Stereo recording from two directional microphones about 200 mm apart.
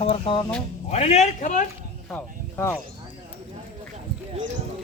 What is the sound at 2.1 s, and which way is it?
Speech, 10° left (ahead or behind).